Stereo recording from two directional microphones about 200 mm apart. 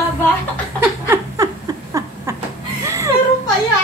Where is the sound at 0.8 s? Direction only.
15° right (ahead or behind).